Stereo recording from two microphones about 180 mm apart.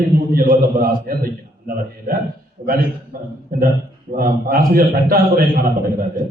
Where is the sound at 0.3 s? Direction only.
50° right (ahead or behind).